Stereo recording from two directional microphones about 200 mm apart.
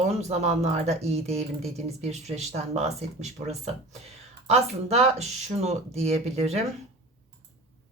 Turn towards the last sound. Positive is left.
turn(degrees=-30)  # may be behind; listen again after turning